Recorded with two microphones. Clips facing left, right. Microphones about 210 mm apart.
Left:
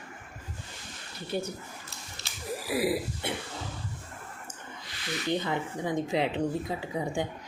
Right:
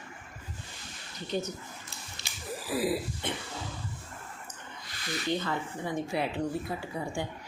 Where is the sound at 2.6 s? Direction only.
10° left (ahead or behind).